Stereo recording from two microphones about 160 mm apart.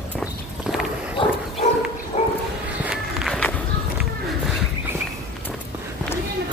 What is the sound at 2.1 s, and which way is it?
Bow-wow, 40° left (ahead or behind).